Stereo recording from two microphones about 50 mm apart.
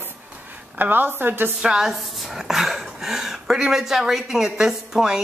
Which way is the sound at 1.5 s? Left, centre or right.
Centre.